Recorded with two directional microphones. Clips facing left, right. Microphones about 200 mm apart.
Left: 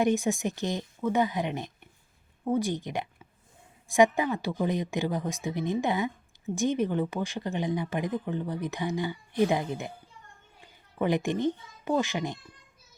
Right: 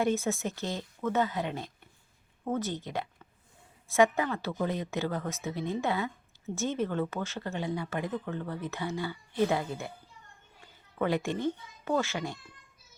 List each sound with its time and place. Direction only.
0.0 s a child's voice: 15° left (ahead or behind)